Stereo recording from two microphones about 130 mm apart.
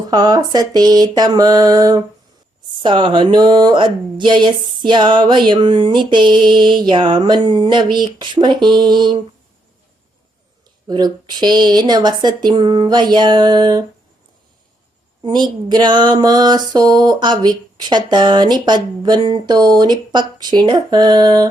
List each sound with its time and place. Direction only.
0.1 s speech: 30° right (ahead or behind)
10.8 s speech: 30° right (ahead or behind)
15.2 s a woman's voice: 35° right (ahead or behind)